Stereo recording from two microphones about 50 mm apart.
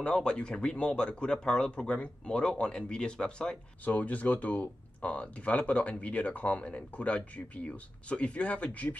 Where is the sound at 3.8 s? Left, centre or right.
Left.